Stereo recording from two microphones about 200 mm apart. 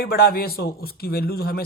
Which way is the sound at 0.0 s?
50° left (ahead or behind).